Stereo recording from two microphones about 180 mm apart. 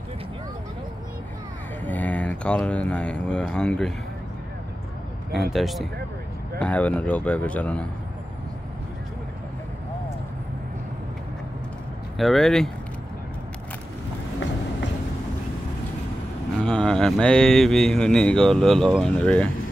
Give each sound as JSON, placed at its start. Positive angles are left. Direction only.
{"t": 1.9, "sound": "speech", "side_deg": 10}
{"t": 5.5, "sound": "speech", "side_deg": 0}
{"t": 12.2, "sound": "speech", "side_deg": 0}
{"t": 16.6, "sound": "speech", "side_deg": 5}